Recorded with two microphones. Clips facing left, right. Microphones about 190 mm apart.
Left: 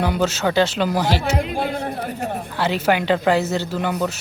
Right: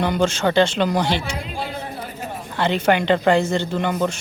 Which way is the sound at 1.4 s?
55° left (ahead or behind).